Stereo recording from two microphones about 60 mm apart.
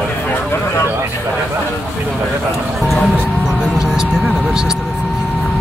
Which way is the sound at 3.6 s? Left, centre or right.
Centre.